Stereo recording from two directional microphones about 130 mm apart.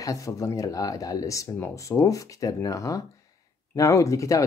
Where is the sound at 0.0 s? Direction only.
25° left (ahead or behind).